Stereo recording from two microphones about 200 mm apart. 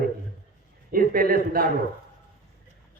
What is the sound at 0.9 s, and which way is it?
Speech, 45° right (ahead or behind).